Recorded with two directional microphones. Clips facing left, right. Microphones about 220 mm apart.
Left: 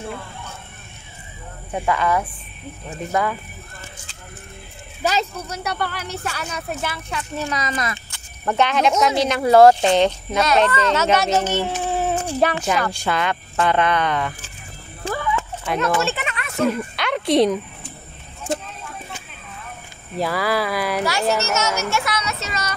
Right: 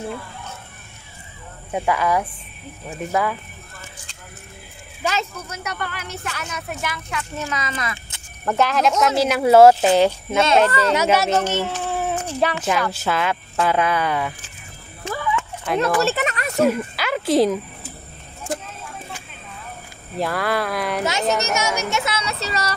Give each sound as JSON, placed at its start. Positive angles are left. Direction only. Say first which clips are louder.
{"t": 1.7, "sound": "speech", "louder": "even", "side_deg": -10}
{"t": 5.0, "sound": "speech", "louder": "left 3 dB", "side_deg": 35}
{"t": 8.5, "sound": "speech", "louder": "even", "side_deg": 0}
{"t": 11.3, "sound": "a sound", "louder": "left 1 dB", "side_deg": 10}
{"t": 12.5, "sound": "speech", "louder": "even", "side_deg": 0}
{"t": 15.0, "sound": "dog", "louder": "left 2 dB", "side_deg": 30}
{"t": 15.6, "sound": "speech", "louder": "right 2 dB", "side_deg": 0}
{"t": 16.0, "sound": "a sound", "louder": "right 3 dB", "side_deg": -40}
{"t": 16.6, "sound": "a sound", "louder": "even", "side_deg": -5}
{"t": 20.2, "sound": "speech", "louder": "left 1 dB", "side_deg": 0}
{"t": 21.0, "sound": "speech", "louder": "even", "side_deg": -20}